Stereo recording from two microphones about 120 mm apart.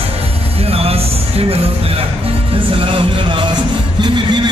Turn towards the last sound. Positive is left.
turn(degrees=-40)  # may be behind; listen again after turning